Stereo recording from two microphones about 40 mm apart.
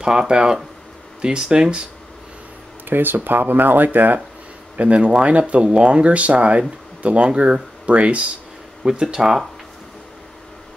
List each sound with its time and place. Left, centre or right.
0.0 s speech: centre
2.9 s speech: right
4.7 s speech: right
8.8 s speech: centre
9.2 s speech: centre